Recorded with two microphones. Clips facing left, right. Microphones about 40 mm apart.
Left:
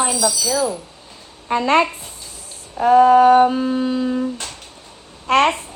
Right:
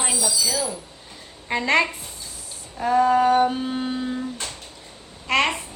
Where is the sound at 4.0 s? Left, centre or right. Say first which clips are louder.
Left 7 dB; left.